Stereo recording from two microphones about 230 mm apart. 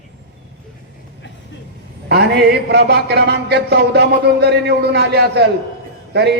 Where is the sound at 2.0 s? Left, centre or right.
Right.